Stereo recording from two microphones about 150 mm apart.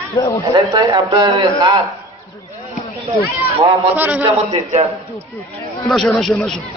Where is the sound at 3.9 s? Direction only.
10° right (ahead or behind).